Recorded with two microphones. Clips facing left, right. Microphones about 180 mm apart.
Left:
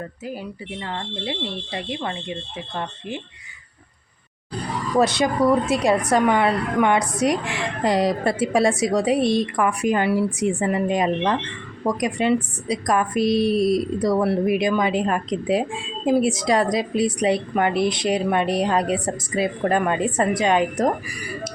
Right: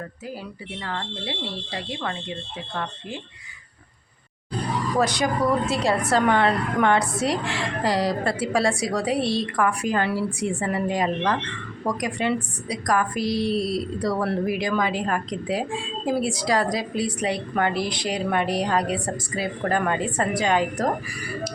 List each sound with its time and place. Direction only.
0.8 s a woman's voice: 20° left (ahead or behind)
4.9 s a woman's voice: 25° left (ahead or behind)